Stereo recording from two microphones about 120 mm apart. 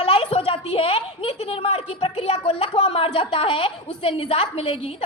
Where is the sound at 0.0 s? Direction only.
50° left (ahead or behind).